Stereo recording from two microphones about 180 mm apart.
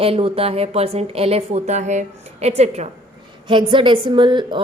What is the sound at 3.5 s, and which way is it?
A woman's voice, 30° right (ahead or behind).